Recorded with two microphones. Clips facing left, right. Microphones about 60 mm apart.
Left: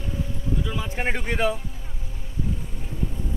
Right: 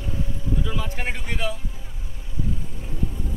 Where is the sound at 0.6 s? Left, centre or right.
Centre.